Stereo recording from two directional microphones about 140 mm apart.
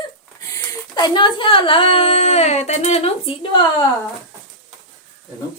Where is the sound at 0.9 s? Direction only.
30° left (ahead or behind).